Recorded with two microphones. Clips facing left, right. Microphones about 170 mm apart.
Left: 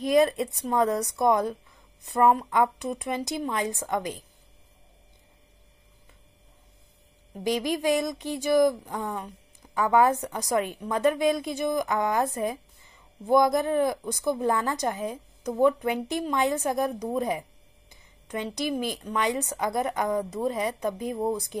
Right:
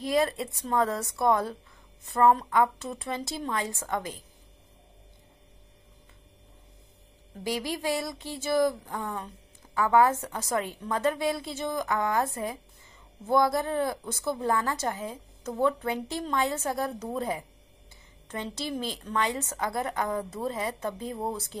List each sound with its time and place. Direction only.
0.0 s a woman's voice: 20° left (ahead or behind)
7.4 s a woman's voice: 20° left (ahead or behind)